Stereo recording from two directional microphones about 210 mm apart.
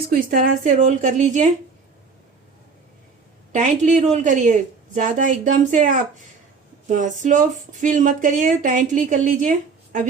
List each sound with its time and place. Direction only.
0.1 s speech: 45° right (ahead or behind)
3.5 s speech: 35° right (ahead or behind)